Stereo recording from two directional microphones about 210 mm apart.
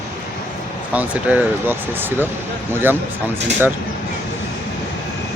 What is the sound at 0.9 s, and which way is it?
Speech, 5° right (ahead or behind).